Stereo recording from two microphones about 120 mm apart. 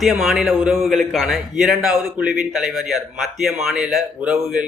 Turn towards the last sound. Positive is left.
turn(degrees=-5)  # may be behind; listen again after turning